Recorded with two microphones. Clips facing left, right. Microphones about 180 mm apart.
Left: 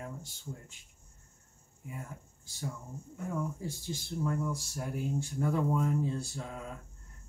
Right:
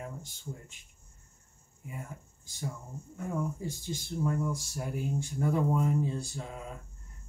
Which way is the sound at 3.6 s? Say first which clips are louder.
Right 2 dB; 15° right (ahead or behind).